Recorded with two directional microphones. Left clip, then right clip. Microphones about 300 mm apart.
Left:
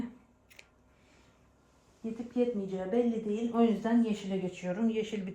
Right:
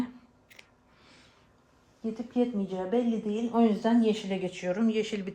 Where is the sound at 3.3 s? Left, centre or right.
Right.